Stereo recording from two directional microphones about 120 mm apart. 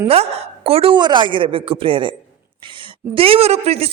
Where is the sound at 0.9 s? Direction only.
40° right (ahead or behind).